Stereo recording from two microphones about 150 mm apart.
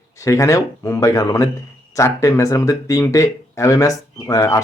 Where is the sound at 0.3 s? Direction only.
20° left (ahead or behind).